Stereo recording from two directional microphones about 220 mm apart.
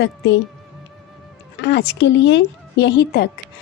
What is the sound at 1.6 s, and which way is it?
A woman's voice, 50° left (ahead or behind).